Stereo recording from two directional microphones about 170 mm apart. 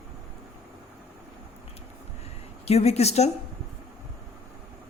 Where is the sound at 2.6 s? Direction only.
40° left (ahead or behind).